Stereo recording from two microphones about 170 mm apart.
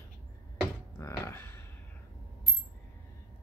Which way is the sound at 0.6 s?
15° left (ahead or behind).